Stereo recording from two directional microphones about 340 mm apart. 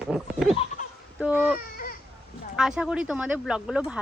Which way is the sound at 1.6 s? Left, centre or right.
Left.